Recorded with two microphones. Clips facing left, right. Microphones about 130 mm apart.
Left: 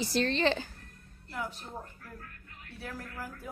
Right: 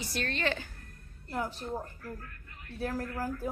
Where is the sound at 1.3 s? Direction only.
35° right (ahead or behind).